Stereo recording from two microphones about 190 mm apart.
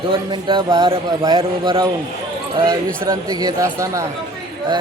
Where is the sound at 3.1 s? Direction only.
20° right (ahead or behind).